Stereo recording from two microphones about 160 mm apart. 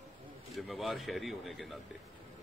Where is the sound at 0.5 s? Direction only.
Centre (ahead or behind).